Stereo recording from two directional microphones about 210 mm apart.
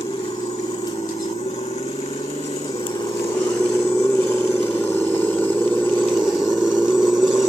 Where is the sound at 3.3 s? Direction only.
15° left (ahead or behind).